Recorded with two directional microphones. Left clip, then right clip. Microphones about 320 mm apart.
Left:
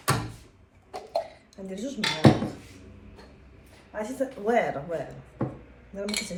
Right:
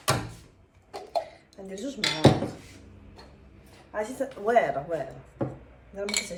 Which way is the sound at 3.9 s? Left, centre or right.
Centre.